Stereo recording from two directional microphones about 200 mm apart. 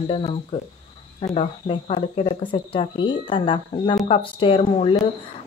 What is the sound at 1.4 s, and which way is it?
Speech, 30° left (ahead or behind).